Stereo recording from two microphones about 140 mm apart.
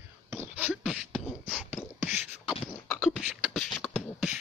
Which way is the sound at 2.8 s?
5° left (ahead or behind).